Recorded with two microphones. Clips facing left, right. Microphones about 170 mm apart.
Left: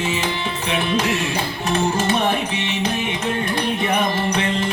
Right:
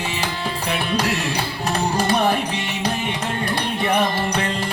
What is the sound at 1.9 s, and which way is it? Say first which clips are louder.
Music: even; 35° right (ahead or behind).